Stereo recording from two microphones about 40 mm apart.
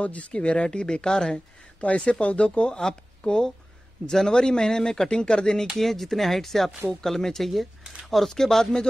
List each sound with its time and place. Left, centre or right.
0.0 s speech: left; by 1.4 s centre
1.8 s speech: left
2.8 s speech: centre
5.8 s speech: centre